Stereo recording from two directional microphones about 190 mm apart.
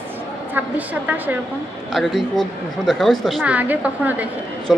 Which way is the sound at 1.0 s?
10° right (ahead or behind).